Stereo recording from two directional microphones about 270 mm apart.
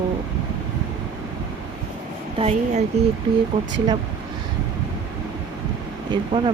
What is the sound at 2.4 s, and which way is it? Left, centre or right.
Speech, right.